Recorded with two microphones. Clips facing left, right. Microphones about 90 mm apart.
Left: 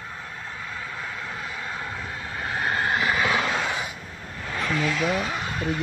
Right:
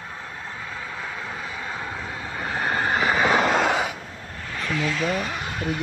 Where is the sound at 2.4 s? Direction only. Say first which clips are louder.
Right 1 dB; 25° right (ahead or behind); by 3.6 s 45° right (ahead or behind).